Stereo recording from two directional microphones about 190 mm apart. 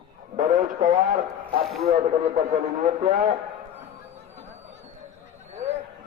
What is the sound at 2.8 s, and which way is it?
Speech, 45° right (ahead or behind).